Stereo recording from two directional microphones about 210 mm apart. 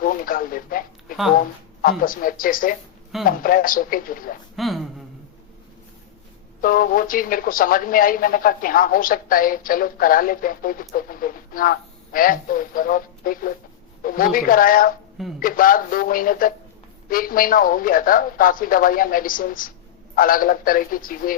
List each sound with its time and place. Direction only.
0.0 s a sound: 40° left (ahead or behind)
1.4 s speech: 40° left (ahead or behind)
4.5 s speech: centre (ahead or behind)
6.6 s speech: 40° left (ahead or behind)